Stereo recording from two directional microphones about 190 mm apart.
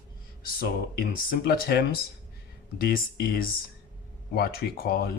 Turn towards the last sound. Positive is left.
turn(degrees=55)  # may be behind; listen again after turning